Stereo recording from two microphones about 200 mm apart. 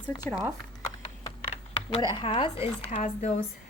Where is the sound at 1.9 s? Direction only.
25° left (ahead or behind).